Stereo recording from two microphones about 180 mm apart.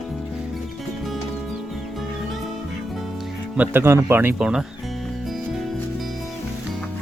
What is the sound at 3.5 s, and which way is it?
Speech, 10° right (ahead or behind).